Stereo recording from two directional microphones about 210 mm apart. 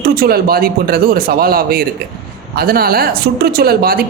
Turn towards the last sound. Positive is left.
turn(degrees=-45)  # may be behind; listen again after turning